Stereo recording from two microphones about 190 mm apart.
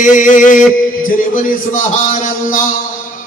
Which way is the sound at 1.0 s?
45° left (ahead or behind).